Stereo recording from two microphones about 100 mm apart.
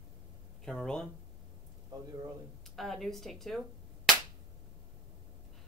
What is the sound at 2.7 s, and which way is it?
Speech, centre (ahead or behind).